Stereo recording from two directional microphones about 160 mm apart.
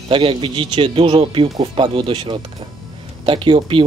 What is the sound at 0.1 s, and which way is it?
Speech, 30° right (ahead or behind).